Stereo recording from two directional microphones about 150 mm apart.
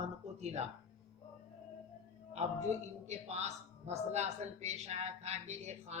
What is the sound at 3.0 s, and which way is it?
A woman's voice, 45° right (ahead or behind).